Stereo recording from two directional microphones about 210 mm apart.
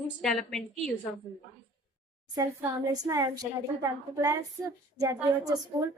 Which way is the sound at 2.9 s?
15° right (ahead or behind).